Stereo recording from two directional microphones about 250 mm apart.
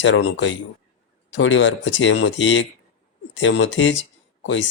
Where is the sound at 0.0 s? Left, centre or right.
Left.